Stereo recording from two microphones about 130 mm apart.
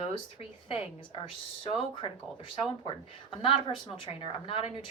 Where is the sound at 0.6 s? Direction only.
45° left (ahead or behind).